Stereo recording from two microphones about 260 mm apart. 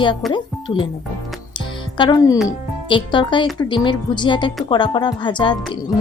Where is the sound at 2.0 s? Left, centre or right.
Centre.